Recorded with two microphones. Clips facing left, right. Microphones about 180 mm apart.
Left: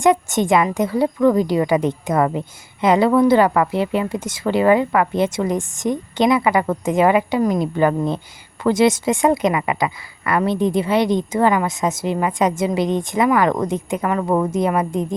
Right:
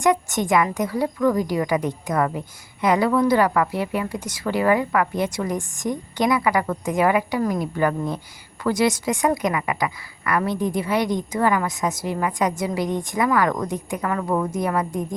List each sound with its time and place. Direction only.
0.0 s a woman's voice: 25° left (ahead or behind)